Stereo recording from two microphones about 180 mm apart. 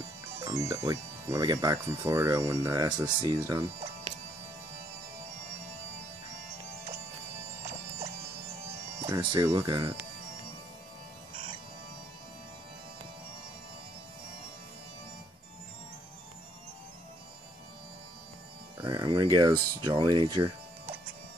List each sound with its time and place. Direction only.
0.4 s speech: 15° right (ahead or behind)
9.0 s speech: 20° right (ahead or behind)
18.8 s speech: 25° right (ahead or behind)